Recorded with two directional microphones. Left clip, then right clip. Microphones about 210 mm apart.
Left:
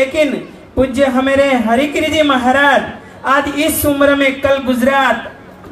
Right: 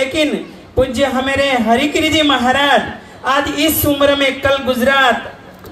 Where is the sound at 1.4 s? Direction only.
40° right (ahead or behind).